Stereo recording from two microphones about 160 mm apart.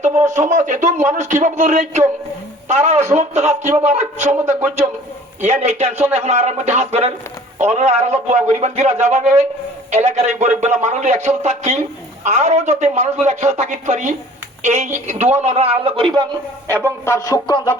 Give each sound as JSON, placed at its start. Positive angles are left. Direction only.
{"t": 0.3, "sound": "a man's voice", "side_deg": -50}
{"t": 16.8, "sound": "speech", "side_deg": 15}